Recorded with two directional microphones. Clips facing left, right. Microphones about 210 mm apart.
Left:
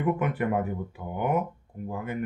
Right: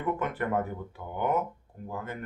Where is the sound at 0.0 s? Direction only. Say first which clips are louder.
Left 4 dB; 10° left (ahead or behind).